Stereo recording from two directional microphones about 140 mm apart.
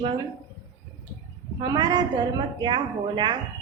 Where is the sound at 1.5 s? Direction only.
30° right (ahead or behind).